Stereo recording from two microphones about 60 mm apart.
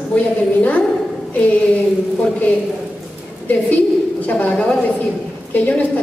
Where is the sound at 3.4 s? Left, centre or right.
Left.